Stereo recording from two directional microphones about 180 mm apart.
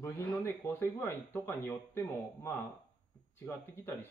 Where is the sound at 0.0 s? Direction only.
20° left (ahead or behind).